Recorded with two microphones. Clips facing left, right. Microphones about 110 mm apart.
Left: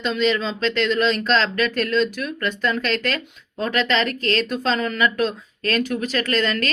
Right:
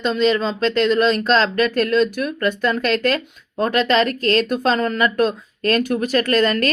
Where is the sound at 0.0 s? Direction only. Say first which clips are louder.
Right 3 dB; 40° right (ahead or behind).